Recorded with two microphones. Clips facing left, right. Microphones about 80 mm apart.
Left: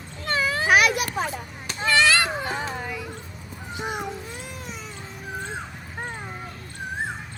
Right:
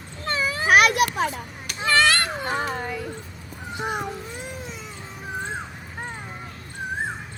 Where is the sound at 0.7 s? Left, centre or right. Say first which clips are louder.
Right 4 dB; right.